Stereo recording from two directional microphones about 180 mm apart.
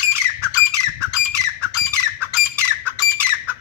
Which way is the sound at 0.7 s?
15° right (ahead or behind).